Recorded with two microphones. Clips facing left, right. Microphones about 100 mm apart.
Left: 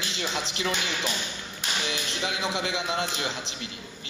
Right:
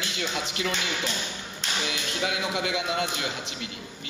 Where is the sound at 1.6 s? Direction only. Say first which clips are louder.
Even; 10° left (ahead or behind).